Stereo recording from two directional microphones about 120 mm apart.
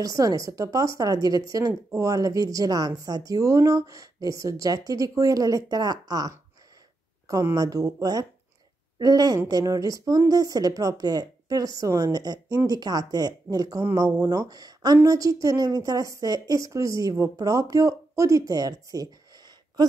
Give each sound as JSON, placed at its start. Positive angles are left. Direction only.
{"t": 0.0, "sound": "speech", "side_deg": -30}
{"t": 7.4, "sound": "speech", "side_deg": -30}